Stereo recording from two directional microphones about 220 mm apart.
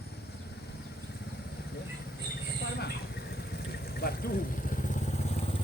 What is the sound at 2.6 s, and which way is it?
Vehicle, 45° left (ahead or behind).